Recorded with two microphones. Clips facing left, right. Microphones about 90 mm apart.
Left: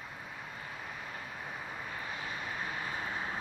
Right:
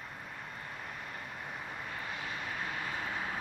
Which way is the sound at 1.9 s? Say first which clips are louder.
Even; 20° left (ahead or behind).